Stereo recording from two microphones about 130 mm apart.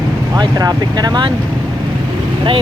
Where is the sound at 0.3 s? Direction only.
30° right (ahead or behind).